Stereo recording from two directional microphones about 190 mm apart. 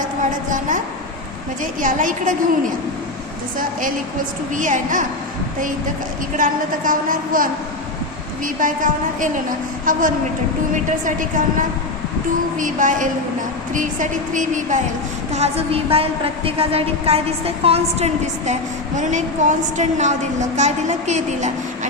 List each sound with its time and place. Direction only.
0.0 s a sound: 45° right (ahead or behind)
1.8 s a woman's voice: 45° right (ahead or behind)
4.5 s a woman's voice: 40° right (ahead or behind)
6.3 s a woman's voice: 45° right (ahead or behind)
11.0 s a woman's voice: 45° right (ahead or behind)
12.5 s a woman's voice: 45° right (ahead or behind)